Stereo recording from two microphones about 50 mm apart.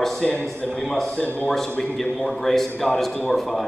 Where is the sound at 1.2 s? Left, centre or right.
Left.